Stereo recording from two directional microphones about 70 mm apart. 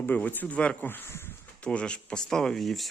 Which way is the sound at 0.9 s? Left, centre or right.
Left.